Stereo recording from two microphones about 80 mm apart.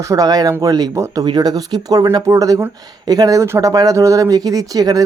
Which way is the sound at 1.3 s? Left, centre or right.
Right.